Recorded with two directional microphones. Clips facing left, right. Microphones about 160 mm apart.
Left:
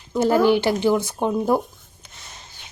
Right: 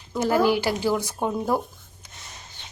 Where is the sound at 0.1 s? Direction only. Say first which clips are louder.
Left 4 dB; 25° left (ahead or behind).